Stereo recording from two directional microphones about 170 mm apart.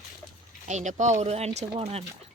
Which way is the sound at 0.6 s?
45° right (ahead or behind).